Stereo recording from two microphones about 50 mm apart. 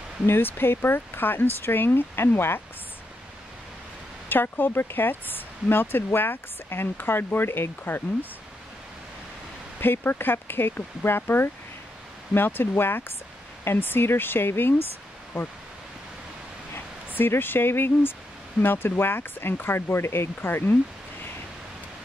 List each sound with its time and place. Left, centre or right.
0.3 s speech: left
4.3 s speech: left
9.8 s speech: left
16.7 s speech: left